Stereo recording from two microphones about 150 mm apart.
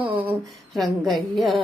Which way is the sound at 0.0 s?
10° right (ahead or behind).